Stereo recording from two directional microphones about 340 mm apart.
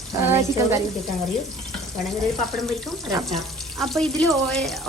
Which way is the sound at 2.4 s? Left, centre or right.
Centre.